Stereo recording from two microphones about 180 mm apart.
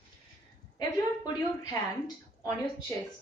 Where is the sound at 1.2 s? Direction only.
20° left (ahead or behind).